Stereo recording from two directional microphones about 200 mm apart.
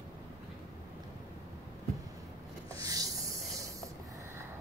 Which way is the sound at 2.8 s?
15° right (ahead or behind).